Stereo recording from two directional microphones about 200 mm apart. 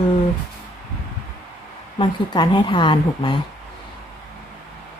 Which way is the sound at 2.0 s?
20° left (ahead or behind).